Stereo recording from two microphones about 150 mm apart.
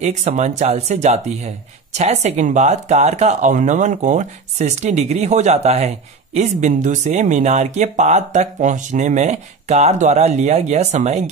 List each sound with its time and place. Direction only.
0.0 s speech: 50° right (ahead or behind)